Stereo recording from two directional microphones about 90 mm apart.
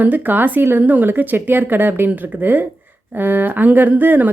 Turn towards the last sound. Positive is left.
turn(degrees=-20)  # may be behind; listen again after turning